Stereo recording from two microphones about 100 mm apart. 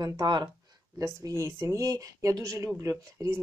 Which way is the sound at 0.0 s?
50° right (ahead or behind).